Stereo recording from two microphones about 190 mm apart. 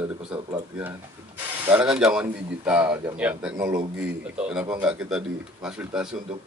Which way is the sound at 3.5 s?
20° right (ahead or behind).